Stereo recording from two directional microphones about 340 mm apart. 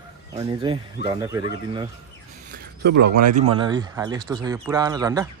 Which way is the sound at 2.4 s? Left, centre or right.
Right.